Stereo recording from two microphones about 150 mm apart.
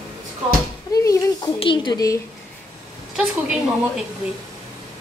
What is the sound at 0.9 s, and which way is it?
Speech, 25° left (ahead or behind).